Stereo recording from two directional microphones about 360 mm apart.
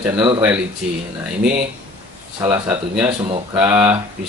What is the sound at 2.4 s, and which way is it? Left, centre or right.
Speech, centre.